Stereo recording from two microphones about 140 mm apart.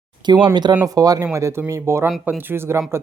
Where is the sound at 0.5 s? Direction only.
35° right (ahead or behind).